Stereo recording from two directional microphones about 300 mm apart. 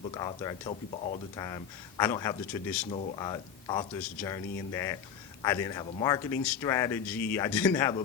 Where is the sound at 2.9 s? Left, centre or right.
Left.